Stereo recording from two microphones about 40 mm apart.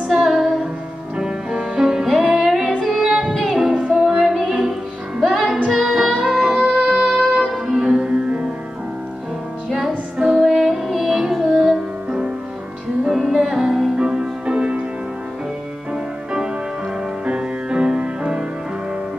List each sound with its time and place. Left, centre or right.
0.1 s music: centre
1.1 s music: centre
2.0 s music: centre
7.3 s music: centre
9.7 s music: centre
10.1 s music: right
10.4 s music: centre
13.0 s music: centre
13.9 s music: centre
15.9 s music: centre